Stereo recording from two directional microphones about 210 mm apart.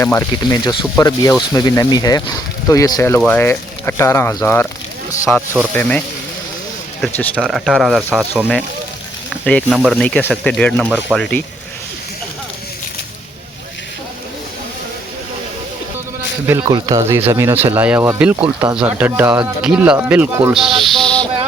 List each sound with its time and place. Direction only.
0.0 s speech: 15° left (ahead or behind)
7.0 s speech: 5° left (ahead or behind)
9.3 s speech: 5° left (ahead or behind)
16.5 s speech: 15° right (ahead or behind); by 21.2 s centre (ahead or behind)